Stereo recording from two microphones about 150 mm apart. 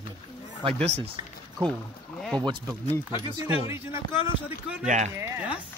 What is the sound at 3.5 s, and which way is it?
Speech, 15° right (ahead or behind).